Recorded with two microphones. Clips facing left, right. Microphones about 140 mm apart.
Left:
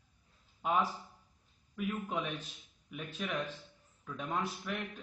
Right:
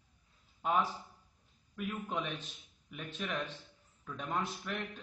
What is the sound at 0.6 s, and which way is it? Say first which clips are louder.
A man's voice: even; 10° left (ahead or behind).